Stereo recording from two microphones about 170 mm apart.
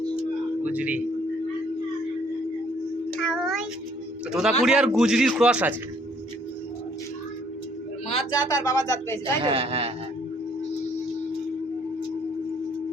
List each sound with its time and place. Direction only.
0.6 s speech: 10° right (ahead or behind)
3.2 s child singing: centre (ahead or behind)
4.3 s a man's voice: 5° right (ahead or behind)
8.3 s speech: 25° left (ahead or behind)
9.4 s speech: 30° right (ahead or behind)